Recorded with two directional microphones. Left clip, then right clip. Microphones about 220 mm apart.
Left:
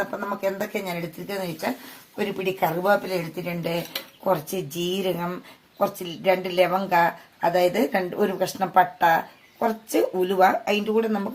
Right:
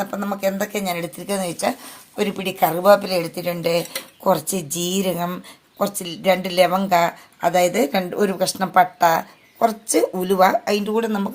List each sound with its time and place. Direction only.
0.0 s a woman's voice: 40° right (ahead or behind)